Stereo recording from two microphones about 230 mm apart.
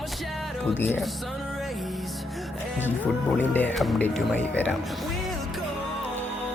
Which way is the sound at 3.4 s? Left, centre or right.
Centre.